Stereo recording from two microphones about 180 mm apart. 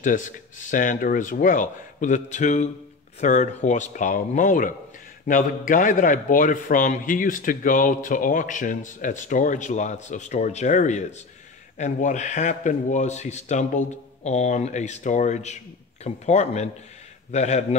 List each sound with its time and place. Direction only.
0.0 s a man's voice: 45° left (ahead or behind)